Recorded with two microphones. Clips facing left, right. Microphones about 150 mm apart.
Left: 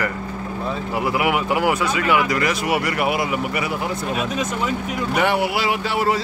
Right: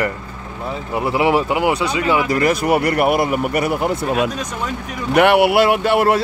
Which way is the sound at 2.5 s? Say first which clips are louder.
Right 5 dB; 45° right (ahead or behind).